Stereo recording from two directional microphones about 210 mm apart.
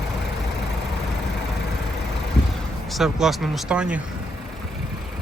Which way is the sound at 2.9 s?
Centre (ahead or behind).